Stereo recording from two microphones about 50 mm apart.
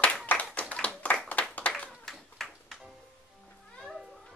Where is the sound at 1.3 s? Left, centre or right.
Left.